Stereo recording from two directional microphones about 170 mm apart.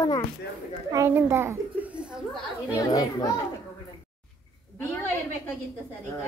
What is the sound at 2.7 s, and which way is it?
Speech, 20° left (ahead or behind).